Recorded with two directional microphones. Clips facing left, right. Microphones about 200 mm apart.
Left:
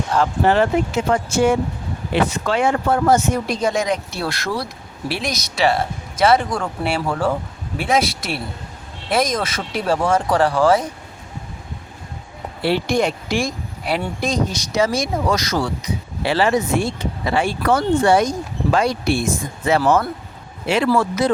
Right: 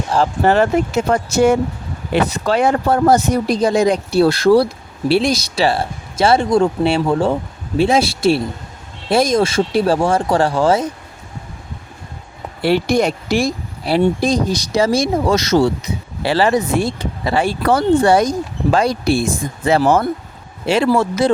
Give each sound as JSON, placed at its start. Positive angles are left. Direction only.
{"t": 0.1, "sound": "speech", "side_deg": -30}
{"t": 0.4, "sound": "speech", "side_deg": -45}
{"t": 12.6, "sound": "speech", "side_deg": -40}